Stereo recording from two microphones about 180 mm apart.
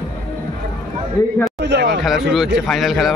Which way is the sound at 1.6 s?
70° right (ahead or behind).